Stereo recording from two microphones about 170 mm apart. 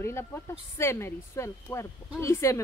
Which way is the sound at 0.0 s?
15° left (ahead or behind).